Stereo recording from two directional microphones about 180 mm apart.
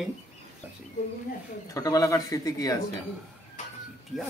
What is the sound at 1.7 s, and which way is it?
Speech, 20° left (ahead or behind).